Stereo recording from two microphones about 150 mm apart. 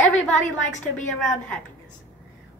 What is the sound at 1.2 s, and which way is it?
Speech, 5° left (ahead or behind).